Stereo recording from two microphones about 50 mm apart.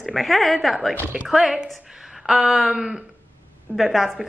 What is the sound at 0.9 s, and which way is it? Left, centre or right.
Speech, right.